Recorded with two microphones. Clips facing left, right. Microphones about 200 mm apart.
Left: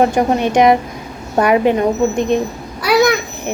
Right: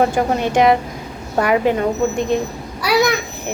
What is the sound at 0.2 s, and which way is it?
Speech, 20° left (ahead or behind).